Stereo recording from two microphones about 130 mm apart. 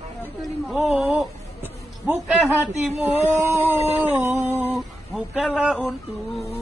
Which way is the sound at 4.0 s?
20° right (ahead or behind).